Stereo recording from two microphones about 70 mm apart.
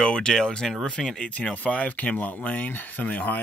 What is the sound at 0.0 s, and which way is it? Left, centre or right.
Speech, centre.